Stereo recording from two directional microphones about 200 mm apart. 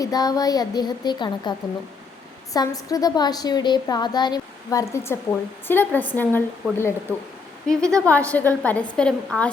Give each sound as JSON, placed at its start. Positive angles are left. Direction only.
{"t": 0.0, "sound": "a woman's voice", "side_deg": 20}